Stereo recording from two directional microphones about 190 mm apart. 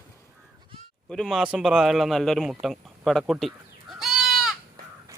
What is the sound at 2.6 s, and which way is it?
Bleat, centre (ahead or behind).